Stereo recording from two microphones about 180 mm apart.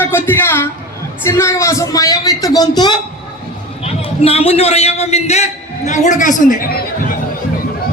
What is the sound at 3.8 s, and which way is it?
A man's voice, 35° left (ahead or behind).